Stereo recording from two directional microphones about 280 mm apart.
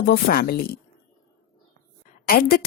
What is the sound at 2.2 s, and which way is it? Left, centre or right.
Speech, left.